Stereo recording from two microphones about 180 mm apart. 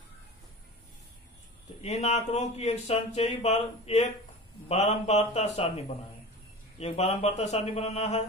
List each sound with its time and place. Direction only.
1.8 s speech: 35° left (ahead or behind)